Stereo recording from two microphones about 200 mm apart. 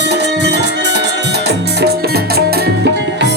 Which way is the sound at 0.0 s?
60° right (ahead or behind).